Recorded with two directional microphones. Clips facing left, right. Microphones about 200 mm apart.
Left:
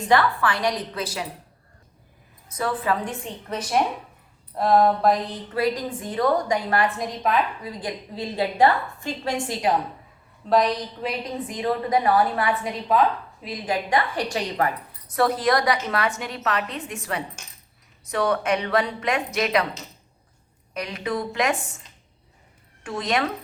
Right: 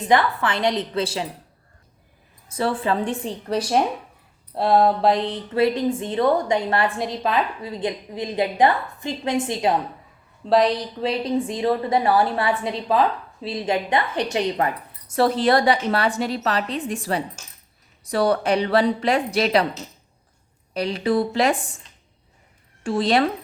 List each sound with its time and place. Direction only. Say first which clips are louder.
0.1 s a woman's voice: right 1 dB; 20° right (ahead or behind)
2.5 s a woman's voice: right 2 dB; 30° right (ahead or behind)
20.7 s a woman's voice: right 7 dB; 30° right (ahead or behind)
22.8 s a woman's voice: right 6 dB; 30° right (ahead or behind)